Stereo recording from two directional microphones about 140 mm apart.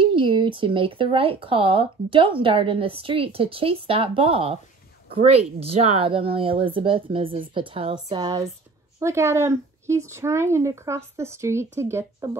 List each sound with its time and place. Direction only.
0.0 s speech: 35° right (ahead or behind)
9.0 s speech: 20° right (ahead or behind)